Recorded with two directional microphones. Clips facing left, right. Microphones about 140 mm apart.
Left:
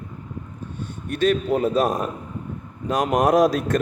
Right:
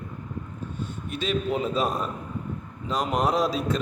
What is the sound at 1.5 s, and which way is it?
A man's voice, 45° left (ahead or behind).